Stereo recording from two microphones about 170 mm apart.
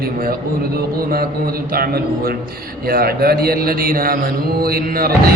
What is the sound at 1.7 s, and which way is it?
A man's voice, 60° right (ahead or behind).